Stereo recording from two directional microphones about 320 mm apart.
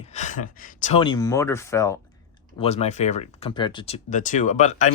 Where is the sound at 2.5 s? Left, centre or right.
Centre.